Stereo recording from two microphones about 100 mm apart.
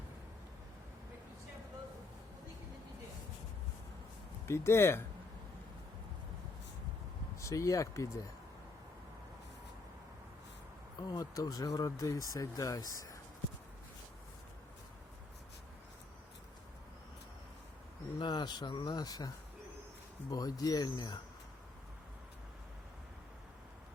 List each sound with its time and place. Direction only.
4.4 s speech: 25° left (ahead or behind)
7.3 s speech: 30° left (ahead or behind)
10.9 s speech: 40° left (ahead or behind)
18.2 s speech: 50° left (ahead or behind)
20.3 s speech: 40° left (ahead or behind)